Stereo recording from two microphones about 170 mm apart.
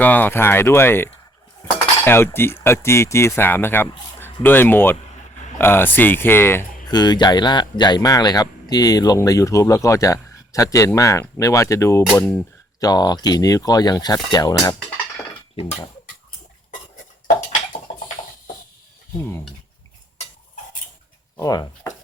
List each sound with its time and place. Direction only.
0.0 s speech: 10° left (ahead or behind)
3.8 s a sound: 25° left (ahead or behind)
4.4 s speech: 10° left (ahead or behind)
6.8 s speech: 25° left (ahead or behind)
21.3 s speech: 20° left (ahead or behind)